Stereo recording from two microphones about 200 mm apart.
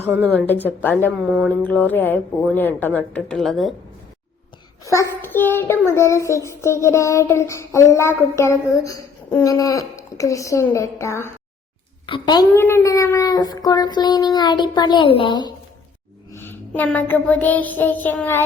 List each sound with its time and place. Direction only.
0.8 s child singing: 10° left (ahead or behind)
4.9 s child singing: 15° left (ahead or behind)
12.0 s speech: 25° left (ahead or behind)
16.3 s child singing: 10° left (ahead or behind)